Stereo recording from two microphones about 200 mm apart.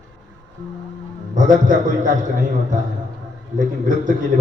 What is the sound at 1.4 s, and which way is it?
Speech, 40° right (ahead or behind).